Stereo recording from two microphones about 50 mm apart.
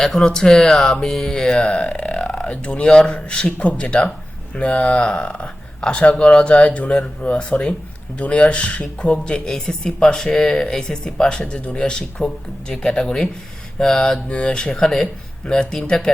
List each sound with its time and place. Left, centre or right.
0.0 s speech: centre
14.8 s speech: centre